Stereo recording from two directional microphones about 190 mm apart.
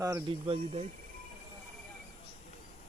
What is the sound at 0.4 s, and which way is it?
Speech, 30° right (ahead or behind).